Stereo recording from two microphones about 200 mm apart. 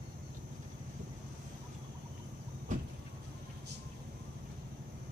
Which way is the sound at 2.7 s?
40° right (ahead or behind).